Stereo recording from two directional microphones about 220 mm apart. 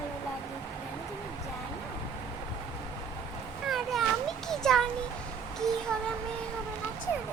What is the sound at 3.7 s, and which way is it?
Children playing, centre (ahead or behind).